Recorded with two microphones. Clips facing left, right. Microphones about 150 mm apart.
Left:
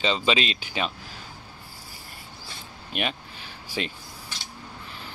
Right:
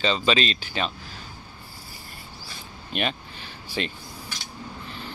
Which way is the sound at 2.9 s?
5° left (ahead or behind).